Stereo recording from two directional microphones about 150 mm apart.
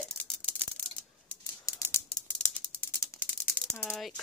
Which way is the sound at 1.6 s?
20° left (ahead or behind).